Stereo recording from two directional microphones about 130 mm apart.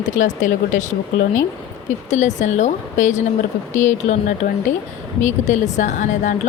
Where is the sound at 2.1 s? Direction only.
65° left (ahead or behind); by 6.3 s 85° left.